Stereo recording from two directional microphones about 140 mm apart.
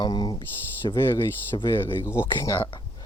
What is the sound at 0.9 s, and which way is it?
Speech, 15° left (ahead or behind).